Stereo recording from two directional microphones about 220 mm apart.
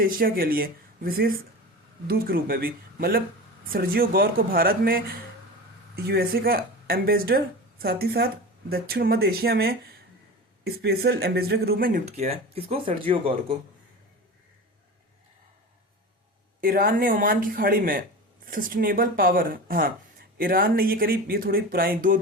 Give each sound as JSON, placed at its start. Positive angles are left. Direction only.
{"t": 0.0, "sound": "a woman's voice", "side_deg": -40}
{"t": 16.6, "sound": "speech", "side_deg": -40}